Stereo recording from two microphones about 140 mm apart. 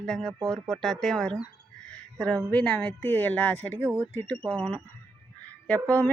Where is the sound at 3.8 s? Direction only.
15° right (ahead or behind).